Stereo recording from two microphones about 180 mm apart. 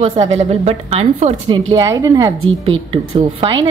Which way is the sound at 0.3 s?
35° right (ahead or behind).